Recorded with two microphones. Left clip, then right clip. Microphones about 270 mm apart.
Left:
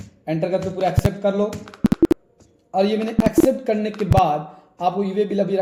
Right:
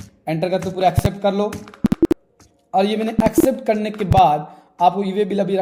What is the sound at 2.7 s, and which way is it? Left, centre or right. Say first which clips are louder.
Speech: right 2 dB; right.